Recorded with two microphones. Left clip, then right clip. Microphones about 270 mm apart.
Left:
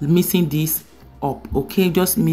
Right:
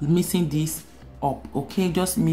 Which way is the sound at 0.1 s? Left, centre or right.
Centre.